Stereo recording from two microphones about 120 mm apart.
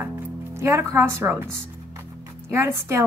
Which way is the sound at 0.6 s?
20° right (ahead or behind).